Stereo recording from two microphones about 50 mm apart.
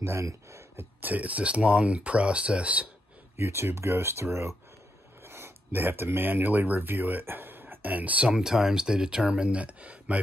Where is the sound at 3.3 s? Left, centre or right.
Right.